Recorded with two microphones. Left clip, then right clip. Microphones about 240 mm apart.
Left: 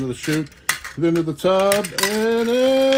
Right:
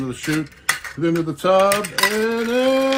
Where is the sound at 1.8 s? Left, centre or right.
Centre.